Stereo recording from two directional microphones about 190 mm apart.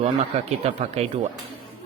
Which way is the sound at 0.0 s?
35° right (ahead or behind).